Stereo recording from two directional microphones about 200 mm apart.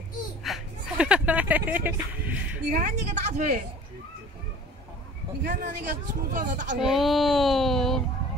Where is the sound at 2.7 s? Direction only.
40° right (ahead or behind).